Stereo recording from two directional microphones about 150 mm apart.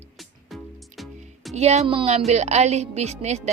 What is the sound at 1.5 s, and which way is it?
Speech, 45° right (ahead or behind).